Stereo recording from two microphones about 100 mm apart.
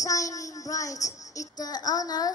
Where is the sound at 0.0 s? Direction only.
35° left (ahead or behind).